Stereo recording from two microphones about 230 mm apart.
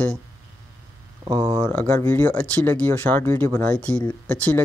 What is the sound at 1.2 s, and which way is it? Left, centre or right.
Speech, centre.